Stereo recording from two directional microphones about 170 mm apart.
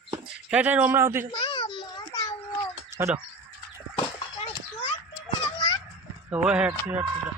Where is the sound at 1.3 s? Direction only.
30° left (ahead or behind).